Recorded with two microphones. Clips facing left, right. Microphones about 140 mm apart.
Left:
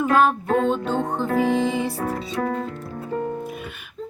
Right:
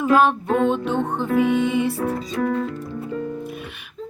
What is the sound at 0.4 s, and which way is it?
Music, 40° left (ahead or behind).